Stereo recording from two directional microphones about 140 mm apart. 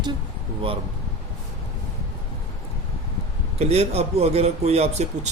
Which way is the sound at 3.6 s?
50° right (ahead or behind).